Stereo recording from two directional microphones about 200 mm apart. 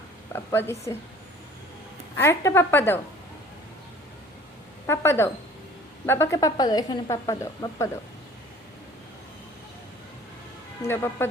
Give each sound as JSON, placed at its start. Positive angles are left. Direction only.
{"t": 0.3, "sound": "speech", "side_deg": 10}
{"t": 2.1, "sound": "speech", "side_deg": 15}
{"t": 4.9, "sound": "speech", "side_deg": 10}
{"t": 10.8, "sound": "speech", "side_deg": 10}